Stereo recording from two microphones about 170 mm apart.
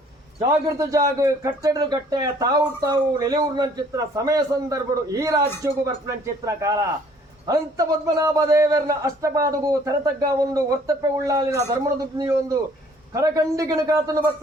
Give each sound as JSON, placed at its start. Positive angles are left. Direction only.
{"t": 0.3, "sound": "a man's voice", "side_deg": -20}